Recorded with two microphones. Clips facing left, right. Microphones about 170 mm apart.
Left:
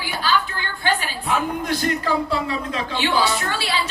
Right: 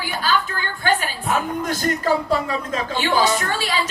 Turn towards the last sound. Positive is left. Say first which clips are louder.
# right 2 dB
turn(degrees=-45)  # may be behind; listen again after turning